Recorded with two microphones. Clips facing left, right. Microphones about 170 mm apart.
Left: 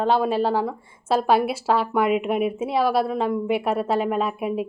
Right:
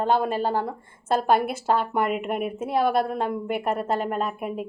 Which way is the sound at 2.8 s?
50° right (ahead or behind).